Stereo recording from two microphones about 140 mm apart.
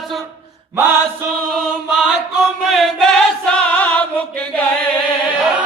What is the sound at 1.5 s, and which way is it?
Chant, 5° right (ahead or behind).